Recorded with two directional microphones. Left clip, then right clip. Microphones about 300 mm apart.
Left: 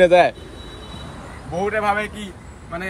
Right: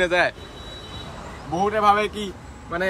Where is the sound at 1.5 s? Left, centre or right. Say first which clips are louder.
Right 2 dB; centre.